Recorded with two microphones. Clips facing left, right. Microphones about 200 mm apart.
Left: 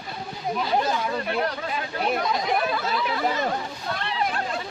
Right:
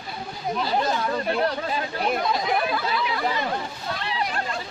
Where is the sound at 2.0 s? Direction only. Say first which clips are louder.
Left 1 dB; centre (ahead or behind).